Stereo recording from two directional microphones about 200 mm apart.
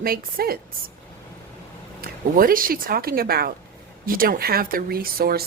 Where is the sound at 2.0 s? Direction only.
45° right (ahead or behind).